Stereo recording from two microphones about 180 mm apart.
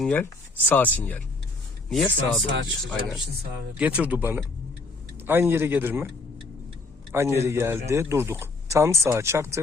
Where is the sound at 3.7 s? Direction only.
5° right (ahead or behind).